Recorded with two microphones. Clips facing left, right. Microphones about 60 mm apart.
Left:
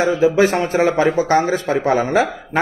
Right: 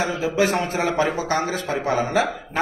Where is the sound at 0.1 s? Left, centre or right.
Left.